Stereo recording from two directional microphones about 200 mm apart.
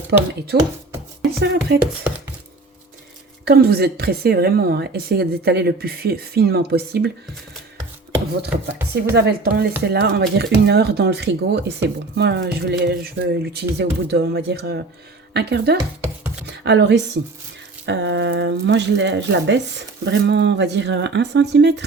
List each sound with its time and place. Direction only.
0.1 s speech: 55° right (ahead or behind)
1.8 s speech: 10° right (ahead or behind)
3.4 s a woman's voice: 50° right (ahead or behind)
8.8 s speech: 10° right (ahead or behind)
9.1 s speech: 55° right (ahead or behind)